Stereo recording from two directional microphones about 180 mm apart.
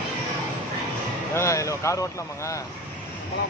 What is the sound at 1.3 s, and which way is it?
Speech, 15° left (ahead or behind).